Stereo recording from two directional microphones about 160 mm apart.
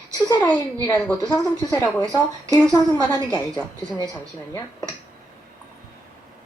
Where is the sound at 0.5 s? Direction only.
25° left (ahead or behind).